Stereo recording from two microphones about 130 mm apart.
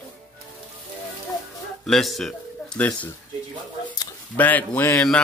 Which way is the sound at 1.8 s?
Centre (ahead or behind).